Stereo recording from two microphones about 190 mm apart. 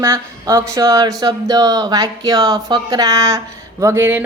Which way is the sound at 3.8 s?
10° right (ahead or behind).